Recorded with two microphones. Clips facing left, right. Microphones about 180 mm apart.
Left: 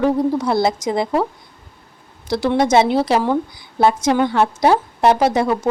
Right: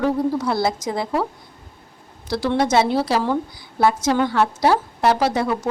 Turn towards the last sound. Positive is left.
turn(degrees=20)  # may be behind; listen again after turning